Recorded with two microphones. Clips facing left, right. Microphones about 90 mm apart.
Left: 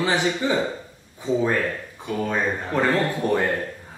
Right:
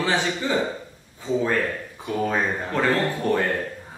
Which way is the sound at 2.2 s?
5° right (ahead or behind).